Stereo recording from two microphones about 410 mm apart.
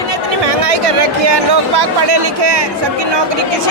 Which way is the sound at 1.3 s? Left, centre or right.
Right.